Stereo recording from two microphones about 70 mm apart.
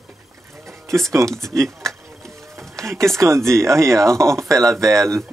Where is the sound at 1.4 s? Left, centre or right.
Right.